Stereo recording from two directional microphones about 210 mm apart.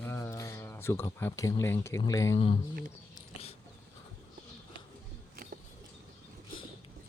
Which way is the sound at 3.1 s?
30° left (ahead or behind).